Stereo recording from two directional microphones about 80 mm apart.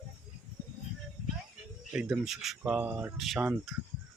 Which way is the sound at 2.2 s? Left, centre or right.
Centre.